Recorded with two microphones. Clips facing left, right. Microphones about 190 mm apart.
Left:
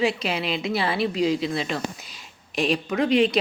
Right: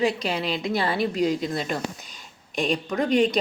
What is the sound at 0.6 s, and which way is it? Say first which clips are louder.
Speech: even; 5° left (ahead or behind).